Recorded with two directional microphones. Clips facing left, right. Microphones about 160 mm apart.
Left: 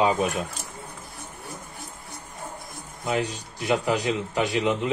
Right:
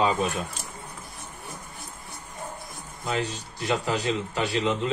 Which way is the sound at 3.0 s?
10° left (ahead or behind).